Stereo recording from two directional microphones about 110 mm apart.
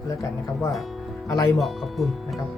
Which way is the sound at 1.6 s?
Centre (ahead or behind).